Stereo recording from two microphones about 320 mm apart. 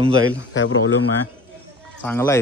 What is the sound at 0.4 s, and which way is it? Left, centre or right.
Speech, left.